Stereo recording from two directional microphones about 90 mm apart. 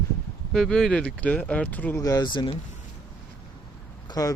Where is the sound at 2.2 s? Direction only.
60° left (ahead or behind).